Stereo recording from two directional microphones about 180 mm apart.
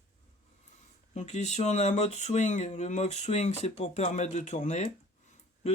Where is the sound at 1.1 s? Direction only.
40° left (ahead or behind).